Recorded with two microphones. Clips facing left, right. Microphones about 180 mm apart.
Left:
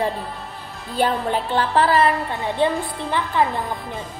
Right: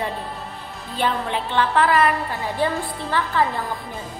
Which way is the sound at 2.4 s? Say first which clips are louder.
Left 3 dB; 20° left (ahead or behind).